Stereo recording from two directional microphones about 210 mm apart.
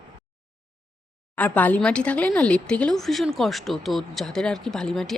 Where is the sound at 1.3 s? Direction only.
5° left (ahead or behind).